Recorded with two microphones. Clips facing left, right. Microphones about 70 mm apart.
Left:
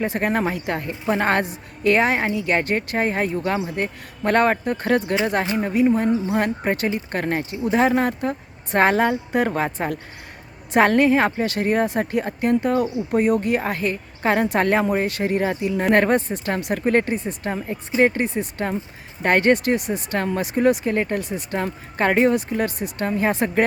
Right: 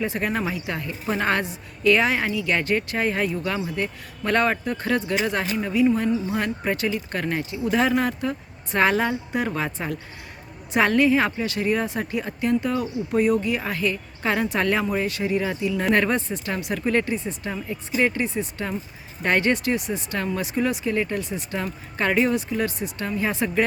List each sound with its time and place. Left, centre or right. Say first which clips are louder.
0.0 s speech: left 4 dB; left